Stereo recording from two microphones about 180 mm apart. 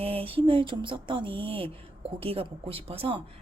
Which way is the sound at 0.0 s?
30° right (ahead or behind).